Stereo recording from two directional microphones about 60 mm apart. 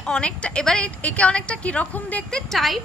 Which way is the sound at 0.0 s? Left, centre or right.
Centre.